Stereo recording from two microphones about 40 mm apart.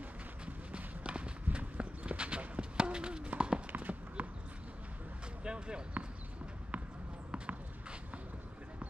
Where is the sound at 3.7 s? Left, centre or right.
Right.